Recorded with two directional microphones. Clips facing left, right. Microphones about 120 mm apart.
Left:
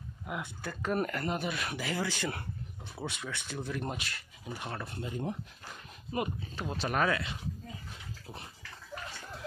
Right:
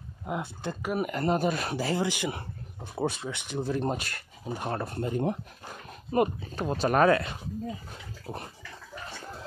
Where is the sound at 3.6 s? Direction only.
30° right (ahead or behind); by 5.4 s 60° right (ahead or behind).